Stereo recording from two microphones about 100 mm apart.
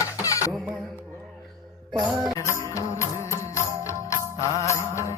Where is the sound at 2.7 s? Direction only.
30° left (ahead or behind).